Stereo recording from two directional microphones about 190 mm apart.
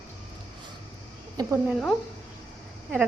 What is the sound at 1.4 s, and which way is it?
Speech, 15° right (ahead or behind).